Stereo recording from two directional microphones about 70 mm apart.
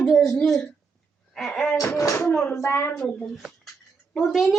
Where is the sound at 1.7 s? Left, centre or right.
Left.